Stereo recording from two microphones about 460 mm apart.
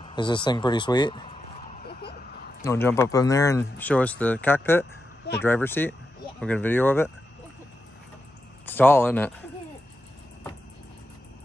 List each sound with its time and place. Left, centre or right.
0.0 s speech: centre
1.9 s a sound: centre
2.6 s speech: centre
8.6 s speech: centre